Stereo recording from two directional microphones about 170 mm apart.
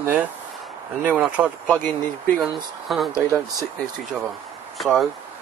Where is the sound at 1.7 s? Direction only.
10° left (ahead or behind).